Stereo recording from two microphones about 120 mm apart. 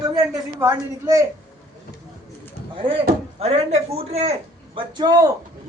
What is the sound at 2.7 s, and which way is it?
Speech, 45° right (ahead or behind).